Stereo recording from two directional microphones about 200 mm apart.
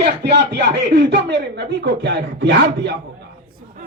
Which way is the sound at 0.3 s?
55° right (ahead or behind).